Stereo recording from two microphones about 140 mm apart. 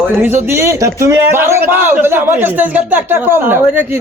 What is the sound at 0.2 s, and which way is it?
A man's voice, 15° right (ahead or behind).